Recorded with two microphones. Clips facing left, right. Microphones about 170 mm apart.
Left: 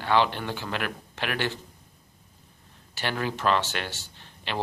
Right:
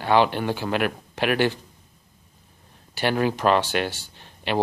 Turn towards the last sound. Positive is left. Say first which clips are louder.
# right 8 dB
turn(degrees=-15)  # may be behind; listen again after turning